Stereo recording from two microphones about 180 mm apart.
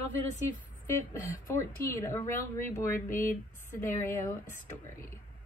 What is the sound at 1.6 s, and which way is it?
Speech, 15° left (ahead or behind).